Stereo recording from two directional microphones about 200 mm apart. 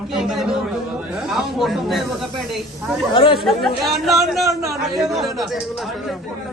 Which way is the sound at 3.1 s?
25° left (ahead or behind).